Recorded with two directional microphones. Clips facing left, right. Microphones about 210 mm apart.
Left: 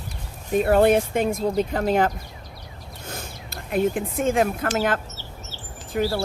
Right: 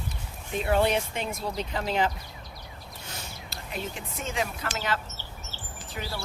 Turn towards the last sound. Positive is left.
turn(degrees=50)  # may be behind; listen again after turning